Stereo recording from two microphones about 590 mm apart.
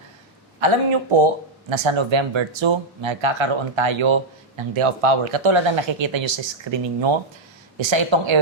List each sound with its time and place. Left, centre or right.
0.6 s speech: right